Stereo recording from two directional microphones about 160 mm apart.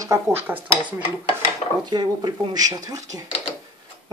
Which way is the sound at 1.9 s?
25° right (ahead or behind).